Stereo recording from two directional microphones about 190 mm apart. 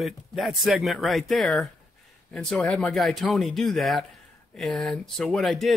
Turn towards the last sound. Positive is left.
turn(degrees=0)  # may be behind; listen again after turning